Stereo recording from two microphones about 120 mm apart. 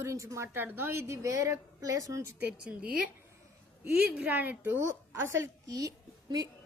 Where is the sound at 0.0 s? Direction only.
25° right (ahead or behind).